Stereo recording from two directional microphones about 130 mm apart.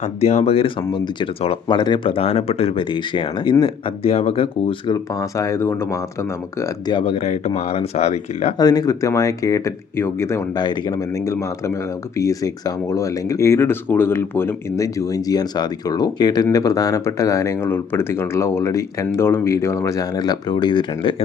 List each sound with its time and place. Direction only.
0.0 s speech: 50° left (ahead or behind)
5.1 s speech: 25° left (ahead or behind)
6.9 s speech: 50° left (ahead or behind)
8.5 s speech: 30° left (ahead or behind)
10.5 s speech: 35° left (ahead or behind)